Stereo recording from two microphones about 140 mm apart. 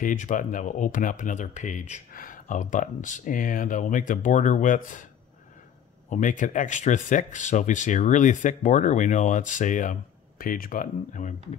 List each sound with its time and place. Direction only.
0.0 s speech: 70° left (ahead or behind)
6.0 s speech: 65° left (ahead or behind)
10.4 s speech: 85° left; by 11.3 s 70° left (ahead or behind)